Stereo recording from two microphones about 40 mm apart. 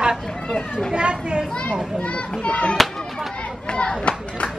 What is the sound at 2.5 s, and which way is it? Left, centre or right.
Speech, left.